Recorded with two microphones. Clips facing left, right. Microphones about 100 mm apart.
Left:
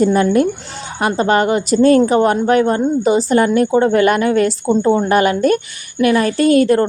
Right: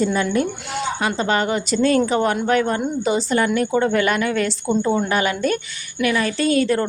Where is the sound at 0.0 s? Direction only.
45° left (ahead or behind).